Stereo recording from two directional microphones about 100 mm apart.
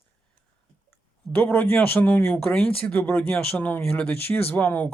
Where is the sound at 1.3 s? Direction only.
20° left (ahead or behind).